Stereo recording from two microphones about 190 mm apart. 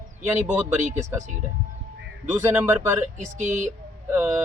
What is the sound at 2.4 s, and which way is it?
Speech, 10° right (ahead or behind).